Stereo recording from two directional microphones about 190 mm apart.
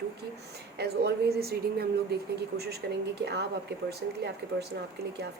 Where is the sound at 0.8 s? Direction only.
60° right (ahead or behind).